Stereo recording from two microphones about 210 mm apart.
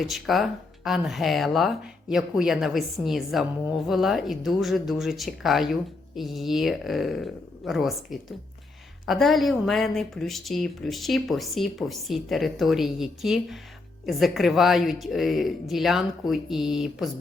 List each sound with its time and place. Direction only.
0.0 s speech: centre (ahead or behind)